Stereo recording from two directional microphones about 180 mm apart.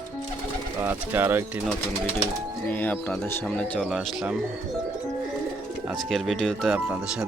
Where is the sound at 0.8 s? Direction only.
10° right (ahead or behind).